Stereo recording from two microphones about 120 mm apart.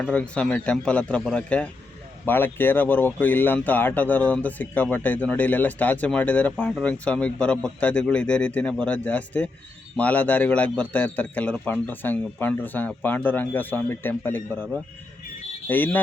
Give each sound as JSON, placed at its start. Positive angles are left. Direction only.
{"t": 0.0, "sound": "speech", "side_deg": 10}